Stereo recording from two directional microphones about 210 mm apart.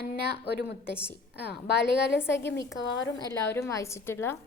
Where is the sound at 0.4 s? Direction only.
55° left (ahead or behind).